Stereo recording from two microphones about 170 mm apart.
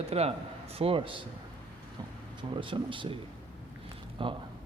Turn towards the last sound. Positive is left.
turn(degrees=-30)  # may be behind; listen again after turning